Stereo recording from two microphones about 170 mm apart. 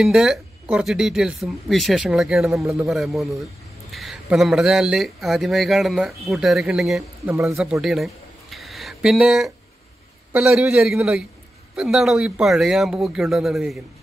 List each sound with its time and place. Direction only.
0.0 s speech: centre (ahead or behind)
2.6 s a man's voice: 15° right (ahead or behind)
2.9 s speech: centre (ahead or behind)
7.8 s a sound: centre (ahead or behind)
10.3 s speech: 5° right (ahead or behind)